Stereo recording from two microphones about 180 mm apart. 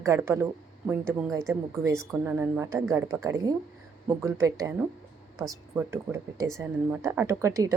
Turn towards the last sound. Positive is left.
turn(degrees=-20)  # may be behind; listen again after turning